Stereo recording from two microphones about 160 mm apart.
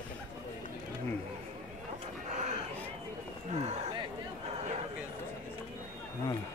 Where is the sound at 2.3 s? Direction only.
45° right (ahead or behind).